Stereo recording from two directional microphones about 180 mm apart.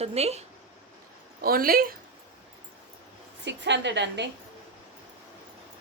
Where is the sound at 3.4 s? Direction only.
80° right.